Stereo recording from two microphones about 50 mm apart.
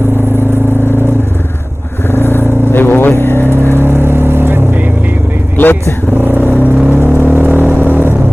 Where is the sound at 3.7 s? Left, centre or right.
Right.